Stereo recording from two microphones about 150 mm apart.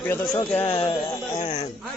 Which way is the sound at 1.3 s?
45° left (ahead or behind).